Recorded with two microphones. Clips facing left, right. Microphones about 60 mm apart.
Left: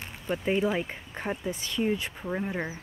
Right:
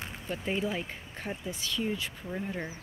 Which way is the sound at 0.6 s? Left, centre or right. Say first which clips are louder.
Left 5 dB; left.